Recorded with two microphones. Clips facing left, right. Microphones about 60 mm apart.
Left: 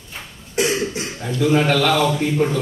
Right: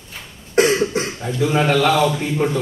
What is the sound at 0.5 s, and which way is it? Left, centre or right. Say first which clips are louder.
Cough: right 5 dB; right.